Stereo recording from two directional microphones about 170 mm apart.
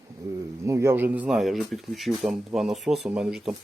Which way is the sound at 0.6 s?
15° right (ahead or behind).